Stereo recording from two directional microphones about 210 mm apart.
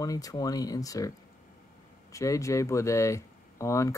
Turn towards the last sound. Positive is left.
turn(degrees=15)  # may be behind; listen again after turning